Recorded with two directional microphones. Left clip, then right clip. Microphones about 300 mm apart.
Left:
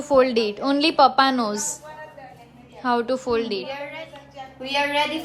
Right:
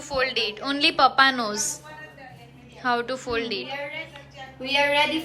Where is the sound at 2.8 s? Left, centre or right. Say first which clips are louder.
Left 3 dB; centre.